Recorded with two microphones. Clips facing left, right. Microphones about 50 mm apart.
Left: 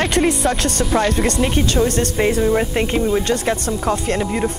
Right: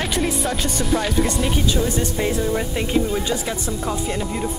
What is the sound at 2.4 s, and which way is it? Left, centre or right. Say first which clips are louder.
Speech: left 6 dB; left.